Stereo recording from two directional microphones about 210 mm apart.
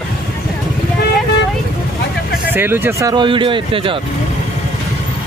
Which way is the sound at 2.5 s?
10° right (ahead or behind).